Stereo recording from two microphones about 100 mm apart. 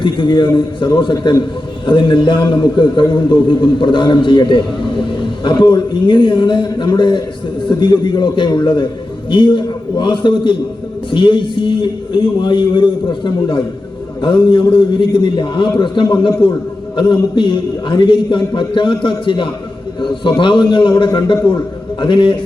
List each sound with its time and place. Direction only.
0.0 s a man's voice: 50° left (ahead or behind)